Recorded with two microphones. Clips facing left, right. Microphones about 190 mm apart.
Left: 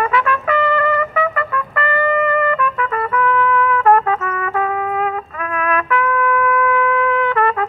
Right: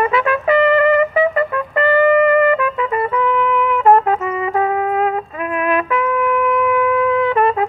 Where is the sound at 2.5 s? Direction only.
25° right (ahead or behind).